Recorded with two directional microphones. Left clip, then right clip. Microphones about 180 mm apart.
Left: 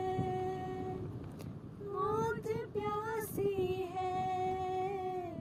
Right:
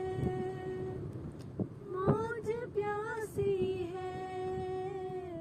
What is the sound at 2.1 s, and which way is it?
Vehicle, 20° left (ahead or behind).